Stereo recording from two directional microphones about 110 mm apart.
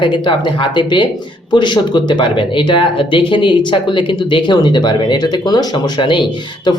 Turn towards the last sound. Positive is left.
turn(degrees=45)  # may be behind; listen again after turning